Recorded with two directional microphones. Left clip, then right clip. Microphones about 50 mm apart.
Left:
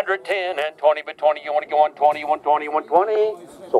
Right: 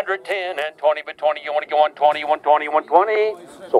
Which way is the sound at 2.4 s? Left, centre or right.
Right.